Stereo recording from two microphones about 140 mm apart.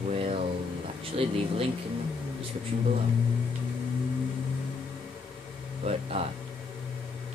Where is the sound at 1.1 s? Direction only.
45° right (ahead or behind).